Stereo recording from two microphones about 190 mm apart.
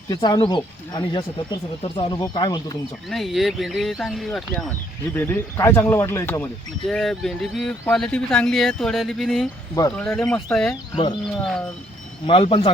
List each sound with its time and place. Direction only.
0.1 s speech: 25° left (ahead or behind)
3.1 s speech: centre (ahead or behind)
10.9 s speech: 25° left (ahead or behind)
12.2 s speech: 25° left (ahead or behind)